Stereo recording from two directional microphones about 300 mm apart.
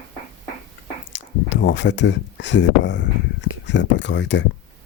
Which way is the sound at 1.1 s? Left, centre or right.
Left.